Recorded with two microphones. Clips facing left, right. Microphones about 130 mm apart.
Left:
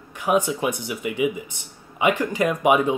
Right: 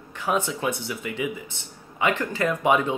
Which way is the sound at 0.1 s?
15° left (ahead or behind).